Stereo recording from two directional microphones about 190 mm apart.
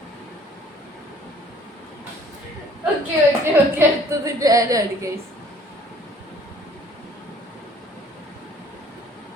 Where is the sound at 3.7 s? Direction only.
15° right (ahead or behind).